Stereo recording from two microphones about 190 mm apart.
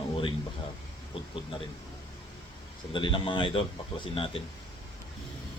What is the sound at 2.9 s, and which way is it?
Speech, 25° left (ahead or behind).